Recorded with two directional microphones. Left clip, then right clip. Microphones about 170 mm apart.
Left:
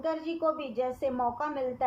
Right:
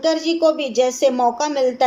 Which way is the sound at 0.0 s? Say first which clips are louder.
Right 13 dB; 55° right (ahead or behind).